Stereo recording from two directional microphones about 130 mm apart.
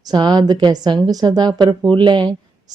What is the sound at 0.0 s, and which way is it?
A woman's voice, 35° right (ahead or behind).